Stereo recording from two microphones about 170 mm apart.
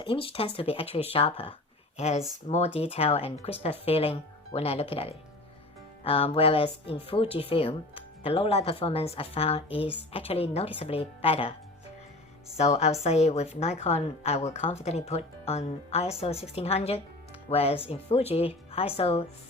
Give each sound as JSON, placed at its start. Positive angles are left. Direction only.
{"t": 0.0, "sound": "a woman's voice", "side_deg": 30}
{"t": 12.5, "sound": "a woman's voice", "side_deg": 40}